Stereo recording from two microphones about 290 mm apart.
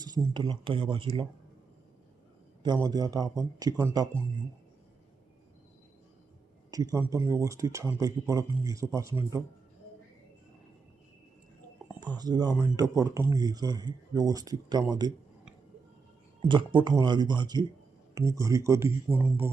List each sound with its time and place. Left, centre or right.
0.0 s speech: centre
2.8 s speech: centre
6.7 s speech: centre
11.9 s speech: centre
16.4 s speech: centre
19.1 s mantra: centre